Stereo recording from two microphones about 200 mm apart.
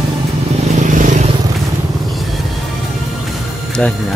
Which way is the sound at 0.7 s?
40° right (ahead or behind).